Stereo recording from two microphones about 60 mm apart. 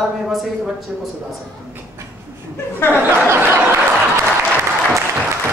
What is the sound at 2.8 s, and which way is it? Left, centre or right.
Speech, left.